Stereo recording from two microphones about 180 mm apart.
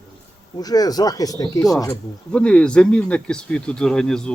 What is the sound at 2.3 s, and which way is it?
Speech, 5° left (ahead or behind).